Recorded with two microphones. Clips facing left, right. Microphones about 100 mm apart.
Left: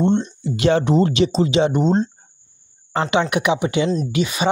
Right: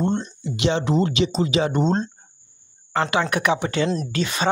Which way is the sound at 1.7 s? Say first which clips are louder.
Left 3 dB; 10° left (ahead or behind).